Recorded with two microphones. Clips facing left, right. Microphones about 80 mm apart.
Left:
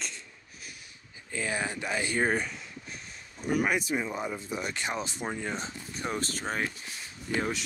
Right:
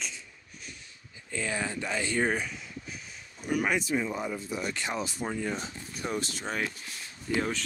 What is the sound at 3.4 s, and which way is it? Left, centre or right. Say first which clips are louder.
Speech: left 1 dB; left.